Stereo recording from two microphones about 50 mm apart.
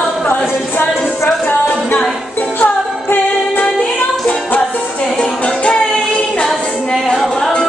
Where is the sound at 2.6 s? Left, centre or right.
Left.